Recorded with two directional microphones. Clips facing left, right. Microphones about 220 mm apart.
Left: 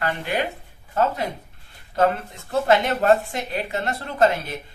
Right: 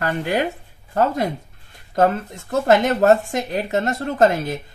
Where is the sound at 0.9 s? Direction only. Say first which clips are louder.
Right 3 dB; 40° right (ahead or behind).